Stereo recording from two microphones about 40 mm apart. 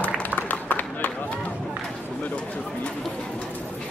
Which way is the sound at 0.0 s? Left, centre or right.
Left.